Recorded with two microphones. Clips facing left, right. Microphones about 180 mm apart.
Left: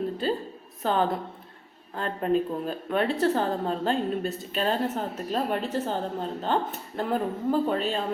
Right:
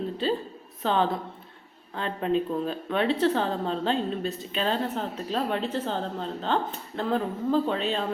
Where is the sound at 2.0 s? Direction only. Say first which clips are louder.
Left 1 dB; 45° left (ahead or behind).